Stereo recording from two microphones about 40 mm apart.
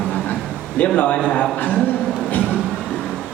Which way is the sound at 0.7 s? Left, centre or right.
Left.